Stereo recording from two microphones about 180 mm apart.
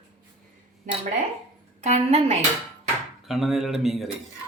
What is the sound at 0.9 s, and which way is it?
A woman's voice, 45° right (ahead or behind).